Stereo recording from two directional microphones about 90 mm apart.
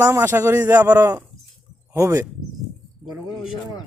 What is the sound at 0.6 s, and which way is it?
Speech, 20° right (ahead or behind).